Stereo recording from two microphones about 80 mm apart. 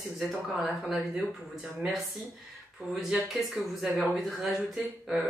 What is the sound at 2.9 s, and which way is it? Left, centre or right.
Speech, centre.